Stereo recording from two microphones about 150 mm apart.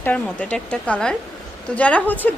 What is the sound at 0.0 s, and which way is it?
A woman's voice, 10° left (ahead or behind).